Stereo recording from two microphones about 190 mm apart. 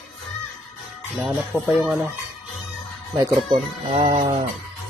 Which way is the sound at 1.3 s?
Centre (ahead or behind).